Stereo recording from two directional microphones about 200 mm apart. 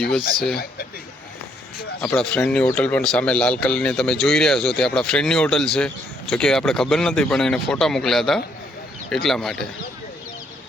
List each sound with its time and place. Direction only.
0.5 s speech: 50° left (ahead or behind)
2.0 s speech: 5° left (ahead or behind)